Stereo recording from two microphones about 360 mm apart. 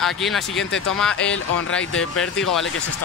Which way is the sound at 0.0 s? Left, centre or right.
Centre.